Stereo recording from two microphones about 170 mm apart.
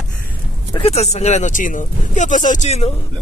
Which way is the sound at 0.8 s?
40° left (ahead or behind).